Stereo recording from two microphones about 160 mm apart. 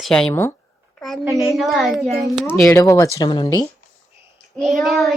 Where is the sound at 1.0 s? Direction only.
Centre (ahead or behind).